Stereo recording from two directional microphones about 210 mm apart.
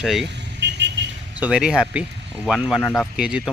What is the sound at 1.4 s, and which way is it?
Speech, 5° right (ahead or behind).